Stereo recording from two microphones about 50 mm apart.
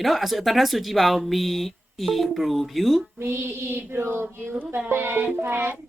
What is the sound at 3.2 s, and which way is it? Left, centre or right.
Child singing, right.